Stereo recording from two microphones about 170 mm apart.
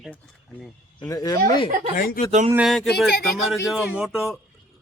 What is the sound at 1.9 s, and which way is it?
Speech, 55° left (ahead or behind).